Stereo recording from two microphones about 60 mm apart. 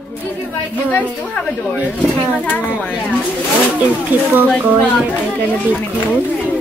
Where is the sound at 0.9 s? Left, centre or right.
Left.